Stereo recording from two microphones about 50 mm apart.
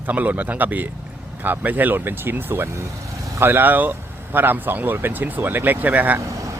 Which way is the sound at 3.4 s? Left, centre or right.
Right.